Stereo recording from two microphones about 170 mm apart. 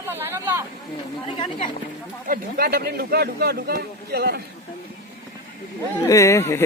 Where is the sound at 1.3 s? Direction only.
30° left (ahead or behind).